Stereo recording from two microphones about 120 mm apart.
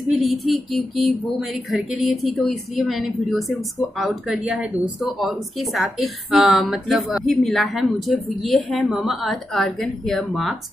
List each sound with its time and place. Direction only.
0.1 s speech: centre (ahead or behind)